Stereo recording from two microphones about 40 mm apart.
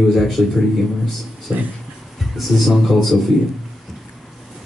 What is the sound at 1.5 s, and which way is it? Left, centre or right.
Speech, right.